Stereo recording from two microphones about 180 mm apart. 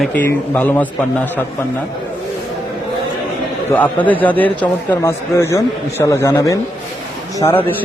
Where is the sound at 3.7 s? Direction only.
10° left (ahead or behind).